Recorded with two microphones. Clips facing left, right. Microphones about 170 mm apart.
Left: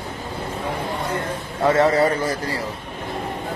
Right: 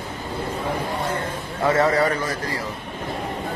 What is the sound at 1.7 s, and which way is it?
Speech, 25° left (ahead or behind).